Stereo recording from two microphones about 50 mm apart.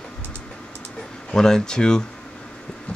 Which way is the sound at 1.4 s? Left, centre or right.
Centre.